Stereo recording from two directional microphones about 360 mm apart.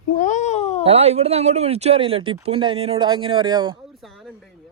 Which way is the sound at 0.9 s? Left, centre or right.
Centre.